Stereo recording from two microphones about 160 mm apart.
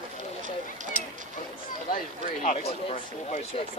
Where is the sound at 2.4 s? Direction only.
45° left (ahead or behind).